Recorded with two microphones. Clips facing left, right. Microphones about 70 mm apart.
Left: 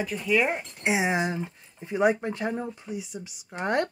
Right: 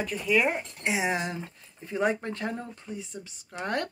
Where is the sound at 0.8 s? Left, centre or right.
Left.